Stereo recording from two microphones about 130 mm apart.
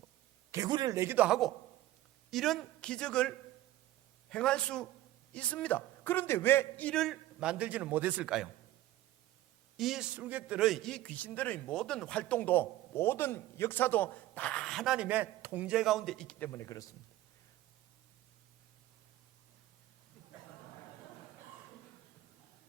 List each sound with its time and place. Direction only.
0.5 s speech: 30° right (ahead or behind)
1.3 s a man's voice: centre (ahead or behind)
9.7 s a man's voice: centre (ahead or behind)
16.5 s speech: 25° left (ahead or behind)